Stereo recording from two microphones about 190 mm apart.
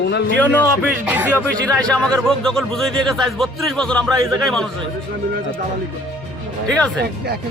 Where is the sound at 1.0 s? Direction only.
10° right (ahead or behind).